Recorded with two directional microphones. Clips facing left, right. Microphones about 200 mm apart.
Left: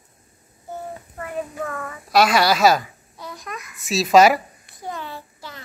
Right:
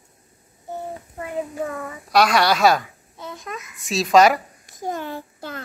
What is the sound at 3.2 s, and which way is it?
Babbling, 25° right (ahead or behind).